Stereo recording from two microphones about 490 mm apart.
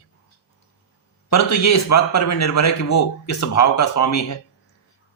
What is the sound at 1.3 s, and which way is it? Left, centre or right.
Speech, left.